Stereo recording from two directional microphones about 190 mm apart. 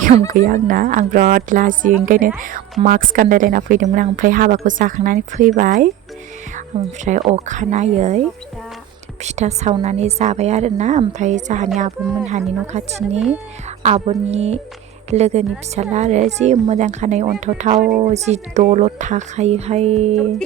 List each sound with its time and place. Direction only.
0.3 s speech: 45° right (ahead or behind)
7.0 s speech: 35° right (ahead or behind)
9.2 s speech: 35° right (ahead or behind)
13.1 s speech: centre (ahead or behind)
13.8 s speech: 35° right (ahead or behind)